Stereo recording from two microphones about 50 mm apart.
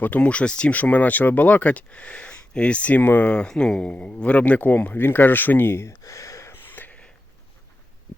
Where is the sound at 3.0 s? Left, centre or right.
Left.